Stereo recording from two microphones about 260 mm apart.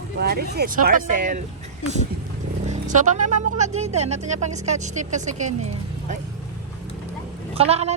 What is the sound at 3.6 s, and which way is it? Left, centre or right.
Speech, right.